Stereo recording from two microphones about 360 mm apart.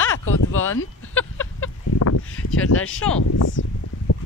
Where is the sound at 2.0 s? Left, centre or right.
Left.